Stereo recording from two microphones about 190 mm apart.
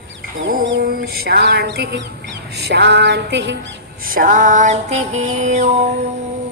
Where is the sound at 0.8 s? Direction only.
55° right (ahead or behind).